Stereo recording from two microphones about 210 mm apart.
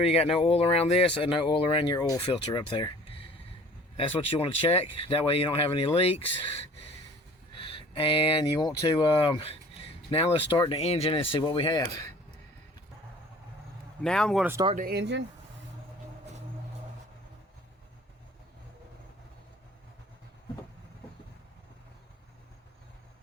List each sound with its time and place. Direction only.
0.0 s speech: 30° left (ahead or behind)
7.5 s speech: 25° left (ahead or behind)
14.0 s speech: 5° left (ahead or behind)
14.8 s speech: 50° right (ahead or behind)